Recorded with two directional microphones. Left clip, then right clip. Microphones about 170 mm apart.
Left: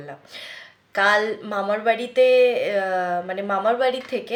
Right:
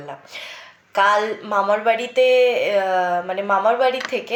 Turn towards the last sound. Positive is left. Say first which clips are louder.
# right 3 dB
turn(degrees=20)  # may be behind; listen again after turning